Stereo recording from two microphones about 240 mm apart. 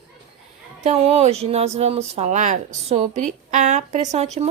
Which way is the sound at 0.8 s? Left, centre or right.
Right.